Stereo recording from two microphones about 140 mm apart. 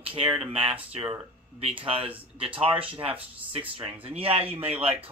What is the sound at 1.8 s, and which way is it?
A man's voice, 45° right (ahead or behind).